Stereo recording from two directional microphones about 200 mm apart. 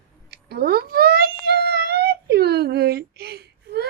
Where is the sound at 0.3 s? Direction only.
50° right (ahead or behind).